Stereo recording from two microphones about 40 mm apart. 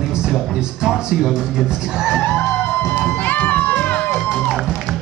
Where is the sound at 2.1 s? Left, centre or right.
Left.